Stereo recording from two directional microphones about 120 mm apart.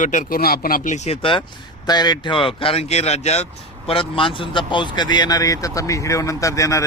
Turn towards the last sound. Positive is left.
turn(degrees=25)  # may be behind; listen again after turning